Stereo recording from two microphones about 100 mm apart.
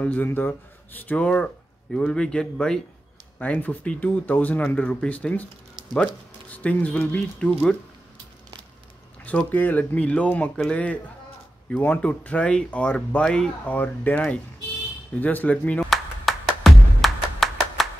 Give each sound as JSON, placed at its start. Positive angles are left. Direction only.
{"t": 0.0, "sound": "speech", "side_deg": 15}
{"t": 6.5, "sound": "speech", "side_deg": 15}
{"t": 9.2, "sound": "speech", "side_deg": 15}
{"t": 15.9, "sound": "music", "side_deg": 0}